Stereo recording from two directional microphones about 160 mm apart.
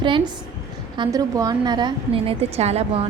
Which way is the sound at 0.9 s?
25° right (ahead or behind).